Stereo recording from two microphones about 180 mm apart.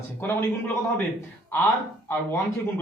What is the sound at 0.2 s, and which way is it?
Speech, 10° left (ahead or behind).